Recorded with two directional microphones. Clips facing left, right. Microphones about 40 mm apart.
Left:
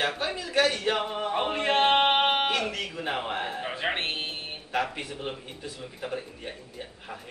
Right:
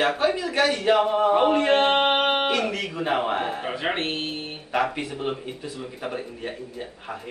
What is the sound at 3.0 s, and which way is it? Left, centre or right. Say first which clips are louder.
Speech: right 7 dB; right.